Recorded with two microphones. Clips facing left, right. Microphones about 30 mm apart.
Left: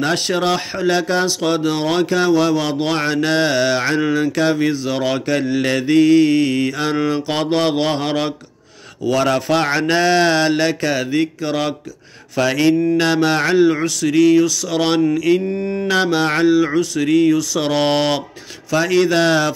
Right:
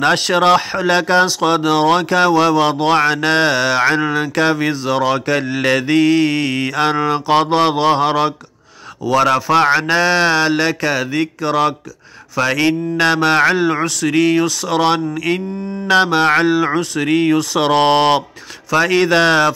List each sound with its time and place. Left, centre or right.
0.0 s speech: right
3.5 s speech: centre
12.4 s speech: right
15.5 s mantra: left
16.4 s speech: right
17.1 s speech: right